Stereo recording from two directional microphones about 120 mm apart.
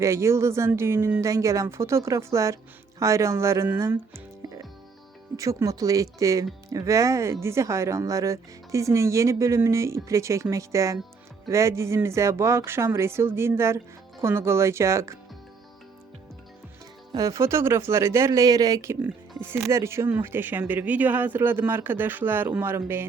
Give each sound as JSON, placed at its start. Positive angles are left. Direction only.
{"t": 0.0, "sound": "speech", "side_deg": -25}
{"t": 17.1, "sound": "speech", "side_deg": -30}